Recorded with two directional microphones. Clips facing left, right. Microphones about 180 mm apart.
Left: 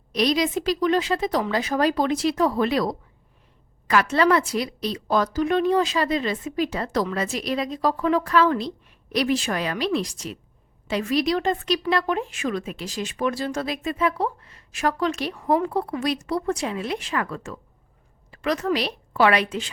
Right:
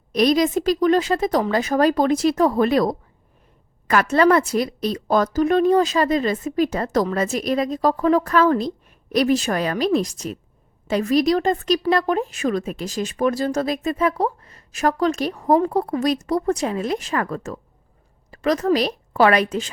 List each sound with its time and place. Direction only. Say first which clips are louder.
0.1 s a woman's voice: right 5 dB; 50° right (ahead or behind)